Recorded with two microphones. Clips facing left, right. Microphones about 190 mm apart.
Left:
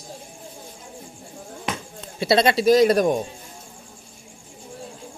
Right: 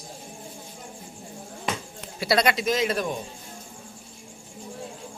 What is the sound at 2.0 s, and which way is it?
Speech, 25° left (ahead or behind).